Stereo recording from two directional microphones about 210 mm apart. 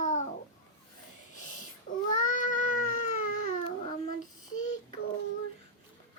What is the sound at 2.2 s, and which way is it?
Cat, 40° left (ahead or behind).